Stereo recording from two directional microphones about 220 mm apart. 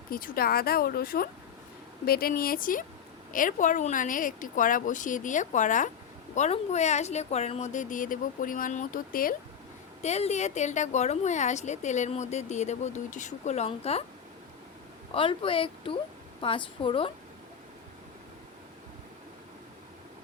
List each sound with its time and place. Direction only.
0.1 s a woman's voice: 40° left (ahead or behind)
15.1 s speech: 25° left (ahead or behind)